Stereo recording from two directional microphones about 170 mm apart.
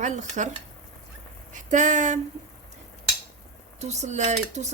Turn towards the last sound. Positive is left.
turn(degrees=-45)  # may be behind; listen again after turning